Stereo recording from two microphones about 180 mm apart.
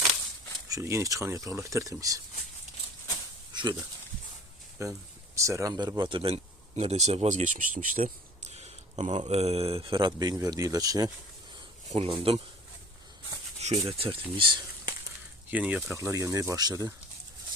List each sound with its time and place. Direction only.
0.7 s speech: 15° right (ahead or behind)
3.5 s speech: 25° right (ahead or behind)
11.9 s speech: 30° right (ahead or behind)
13.6 s speech: 35° right (ahead or behind)
15.4 s speech: 10° right (ahead or behind)